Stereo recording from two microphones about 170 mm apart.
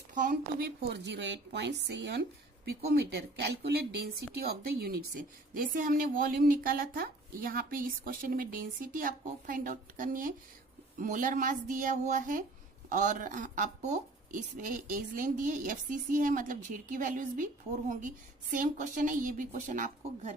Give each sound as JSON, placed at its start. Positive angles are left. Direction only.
{"t": 0.1, "sound": "speech", "side_deg": -50}
{"t": 0.9, "sound": "speech", "side_deg": -90}
{"t": 2.6, "sound": "speech", "side_deg": -70}
{"t": 4.4, "sound": "a woman's voice", "side_deg": -65}